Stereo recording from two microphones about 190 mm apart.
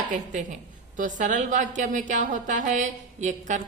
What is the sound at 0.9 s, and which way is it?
A woman's voice, 40° right (ahead or behind).